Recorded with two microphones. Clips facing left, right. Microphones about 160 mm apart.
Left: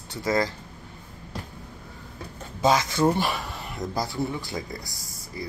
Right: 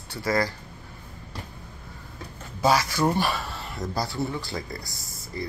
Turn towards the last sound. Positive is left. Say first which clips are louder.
# right 2 dB
turn(degrees=10)  # may be behind; listen again after turning